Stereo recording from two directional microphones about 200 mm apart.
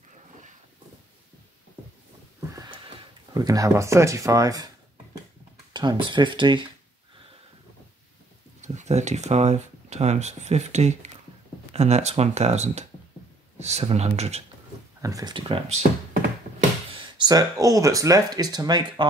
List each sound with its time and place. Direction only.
2.5 s sniff: 20° right (ahead or behind)
3.3 s speech: 15° right (ahead or behind)
5.7 s speech: 20° right (ahead or behind)
8.5 s speech: 35° right (ahead or behind)
15.0 s speech: 15° right (ahead or behind)
17.0 s speech: 20° right (ahead or behind)